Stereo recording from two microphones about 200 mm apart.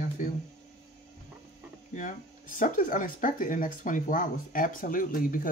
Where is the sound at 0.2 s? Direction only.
40° left (ahead or behind).